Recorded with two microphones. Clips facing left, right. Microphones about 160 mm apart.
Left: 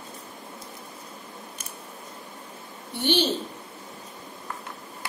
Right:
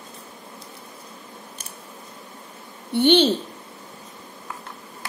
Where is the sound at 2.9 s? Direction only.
65° right (ahead or behind).